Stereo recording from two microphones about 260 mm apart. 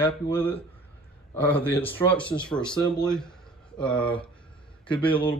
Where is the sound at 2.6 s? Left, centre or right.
Centre.